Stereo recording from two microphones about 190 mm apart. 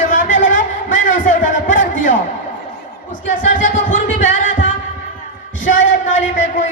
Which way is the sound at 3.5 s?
45° left (ahead or behind).